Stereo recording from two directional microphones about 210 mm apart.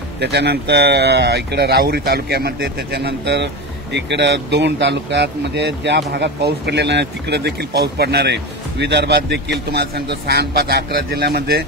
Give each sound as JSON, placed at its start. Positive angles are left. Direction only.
{"t": 0.2, "sound": "speech", "side_deg": -55}